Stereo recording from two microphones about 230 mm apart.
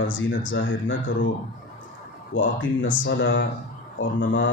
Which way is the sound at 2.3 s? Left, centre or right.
Left.